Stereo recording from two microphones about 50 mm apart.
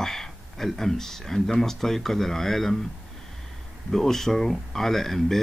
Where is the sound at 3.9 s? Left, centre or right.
Centre.